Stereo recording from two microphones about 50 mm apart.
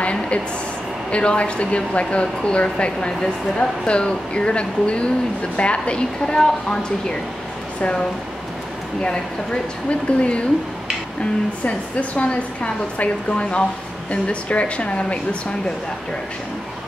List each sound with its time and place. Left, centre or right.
0.0 s a sound: left
1.1 s a woman's voice: left
9.0 s speech: centre
11.6 s speech: left